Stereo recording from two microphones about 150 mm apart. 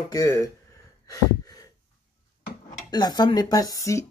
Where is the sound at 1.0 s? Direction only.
25° left (ahead or behind).